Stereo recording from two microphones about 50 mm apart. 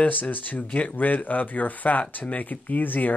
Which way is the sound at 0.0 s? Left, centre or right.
Left.